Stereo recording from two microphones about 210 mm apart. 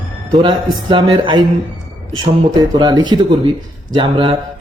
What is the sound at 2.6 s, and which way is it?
A man's voice, 20° right (ahead or behind).